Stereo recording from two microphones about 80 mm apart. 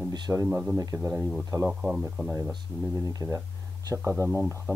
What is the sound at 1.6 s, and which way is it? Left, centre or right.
Speech, centre.